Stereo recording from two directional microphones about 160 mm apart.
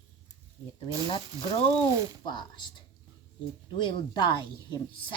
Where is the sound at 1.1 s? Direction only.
40° left (ahead or behind).